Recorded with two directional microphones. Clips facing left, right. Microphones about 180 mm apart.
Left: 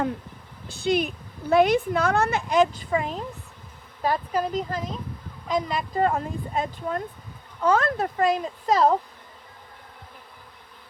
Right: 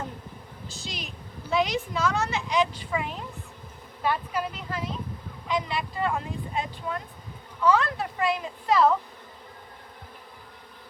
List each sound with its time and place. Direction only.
0.7 s a woman's voice: 55° left (ahead or behind); by 9.0 s 40° left (ahead or behind)